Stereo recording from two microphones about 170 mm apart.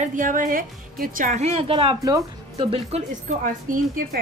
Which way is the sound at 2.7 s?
40° right (ahead or behind).